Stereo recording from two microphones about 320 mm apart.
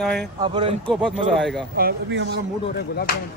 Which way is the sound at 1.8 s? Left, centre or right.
Right.